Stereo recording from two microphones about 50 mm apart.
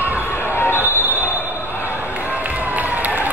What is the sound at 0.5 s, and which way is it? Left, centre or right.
Basketball bounce, left.